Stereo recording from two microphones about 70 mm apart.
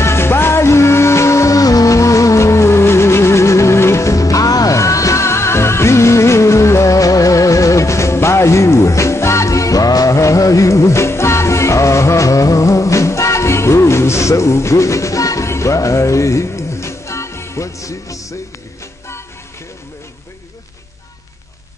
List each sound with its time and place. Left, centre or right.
0.0 s music: left